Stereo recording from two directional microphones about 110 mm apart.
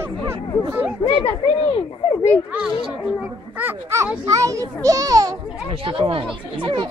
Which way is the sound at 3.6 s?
20° right (ahead or behind).